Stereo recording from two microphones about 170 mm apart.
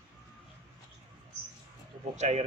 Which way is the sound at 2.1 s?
40° right (ahead or behind).